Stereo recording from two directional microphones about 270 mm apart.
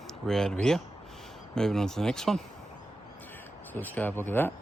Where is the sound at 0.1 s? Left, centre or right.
Centre.